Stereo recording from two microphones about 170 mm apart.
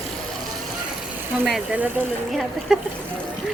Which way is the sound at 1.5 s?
5° right (ahead or behind).